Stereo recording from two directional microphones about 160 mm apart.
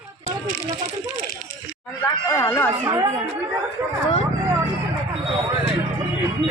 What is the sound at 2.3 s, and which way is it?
Speech, 20° left (ahead or behind).